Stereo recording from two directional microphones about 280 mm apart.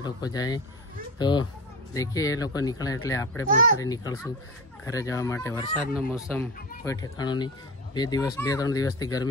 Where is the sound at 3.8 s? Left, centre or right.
Centre.